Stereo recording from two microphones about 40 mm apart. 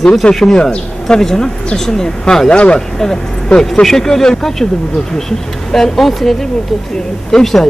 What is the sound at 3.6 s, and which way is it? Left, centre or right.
Speech, centre.